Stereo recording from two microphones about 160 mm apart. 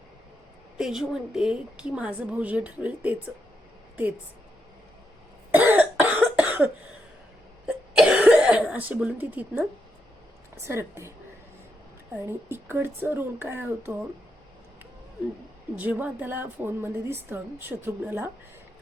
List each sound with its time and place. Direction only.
0.8 s a woman's voice: 5° right (ahead or behind)
5.5 s cough: 10° right (ahead or behind)
7.7 s cough: 5° right (ahead or behind)
8.7 s a woman's voice: 10° right (ahead or behind)
12.1 s a woman's voice: 15° right (ahead or behind)
15.7 s a woman's voice: 10° right (ahead or behind)